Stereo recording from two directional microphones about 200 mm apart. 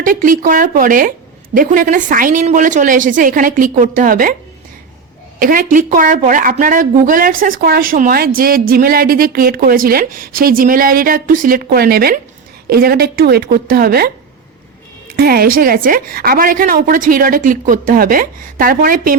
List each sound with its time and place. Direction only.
0.0 s a woman's voice: 45° right (ahead or behind)
5.4 s a woman's voice: 45° right (ahead or behind)
15.1 s a woman's voice: 50° right (ahead or behind)